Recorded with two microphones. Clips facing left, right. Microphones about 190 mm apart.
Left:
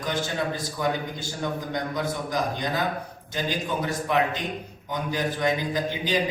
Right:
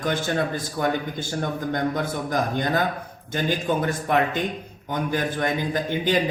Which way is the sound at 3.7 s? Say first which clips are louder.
Right 3 dB; 55° right (ahead or behind).